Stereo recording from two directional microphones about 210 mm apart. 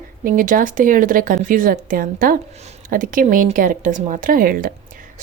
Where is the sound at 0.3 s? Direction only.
40° right (ahead or behind).